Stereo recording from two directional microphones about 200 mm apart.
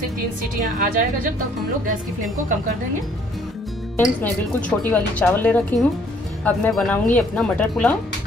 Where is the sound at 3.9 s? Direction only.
10° left (ahead or behind).